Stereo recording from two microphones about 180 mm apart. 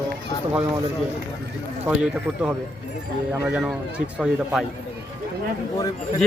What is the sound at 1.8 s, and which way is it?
Speech, 5° right (ahead or behind).